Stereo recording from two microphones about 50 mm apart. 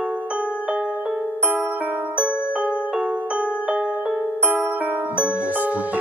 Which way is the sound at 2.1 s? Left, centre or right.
Right.